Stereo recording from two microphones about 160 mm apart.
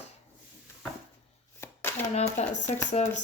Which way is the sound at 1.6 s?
15° left (ahead or behind).